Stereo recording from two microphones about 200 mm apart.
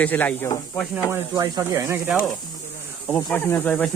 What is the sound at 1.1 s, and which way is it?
Speech, 20° right (ahead or behind).